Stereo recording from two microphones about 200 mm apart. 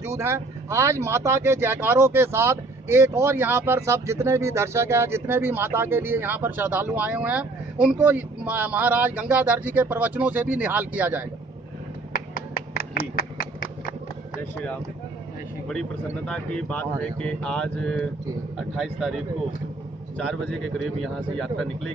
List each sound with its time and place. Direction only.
0.0 s speech: 15° right (ahead or behind)
12.1 s finger snapping: 45° left (ahead or behind)
15.7 s speech: 5° left (ahead or behind)